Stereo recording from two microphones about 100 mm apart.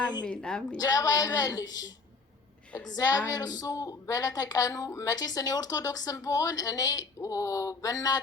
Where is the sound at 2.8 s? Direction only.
40° left (ahead or behind).